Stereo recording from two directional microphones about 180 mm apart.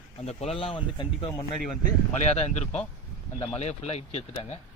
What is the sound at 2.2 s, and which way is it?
Speech, 40° left (ahead or behind).